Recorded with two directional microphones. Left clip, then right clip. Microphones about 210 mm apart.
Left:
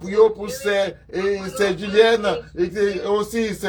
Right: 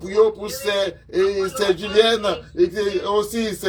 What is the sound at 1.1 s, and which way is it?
A man's voice, 5° left (ahead or behind).